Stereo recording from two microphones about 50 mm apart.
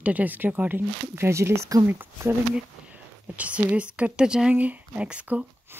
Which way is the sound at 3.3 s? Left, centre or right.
Right.